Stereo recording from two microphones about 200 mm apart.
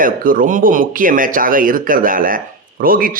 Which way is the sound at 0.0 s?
45° right (ahead or behind).